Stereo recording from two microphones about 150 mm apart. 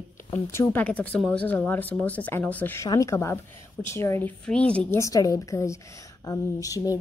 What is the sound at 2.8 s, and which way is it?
A woman's voice, 20° left (ahead or behind).